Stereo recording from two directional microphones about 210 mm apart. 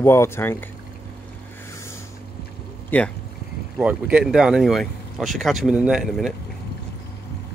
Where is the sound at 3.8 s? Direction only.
5° right (ahead or behind).